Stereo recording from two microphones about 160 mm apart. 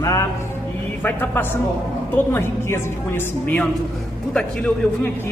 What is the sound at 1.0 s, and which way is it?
A man's voice, 15° left (ahead or behind).